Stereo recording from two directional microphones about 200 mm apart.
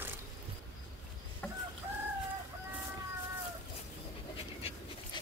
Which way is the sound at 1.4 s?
5° left (ahead or behind).